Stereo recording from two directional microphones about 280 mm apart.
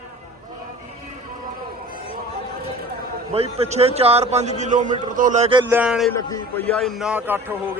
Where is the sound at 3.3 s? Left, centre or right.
Right; by 6.1 s centre.